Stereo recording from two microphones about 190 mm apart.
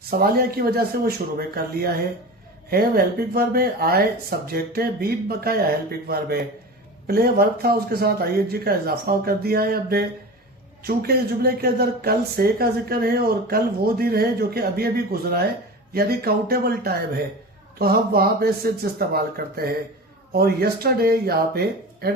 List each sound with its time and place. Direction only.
0.0 s speech: 55° right (ahead or behind)